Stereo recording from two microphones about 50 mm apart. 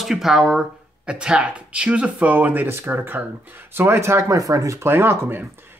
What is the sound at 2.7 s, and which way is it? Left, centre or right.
Speech, right.